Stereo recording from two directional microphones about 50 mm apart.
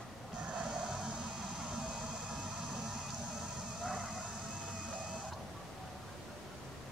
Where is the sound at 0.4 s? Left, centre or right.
Right.